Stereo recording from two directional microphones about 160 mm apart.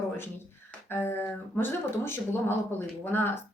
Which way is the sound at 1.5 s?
15° left (ahead or behind).